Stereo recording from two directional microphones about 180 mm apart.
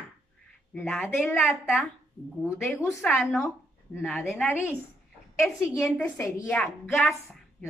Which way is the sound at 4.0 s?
Centre (ahead or behind).